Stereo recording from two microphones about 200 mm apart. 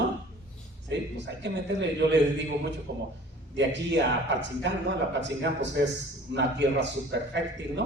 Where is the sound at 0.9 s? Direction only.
60° right (ahead or behind).